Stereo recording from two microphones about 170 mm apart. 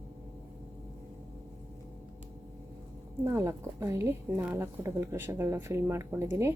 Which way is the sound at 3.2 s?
15° right (ahead or behind).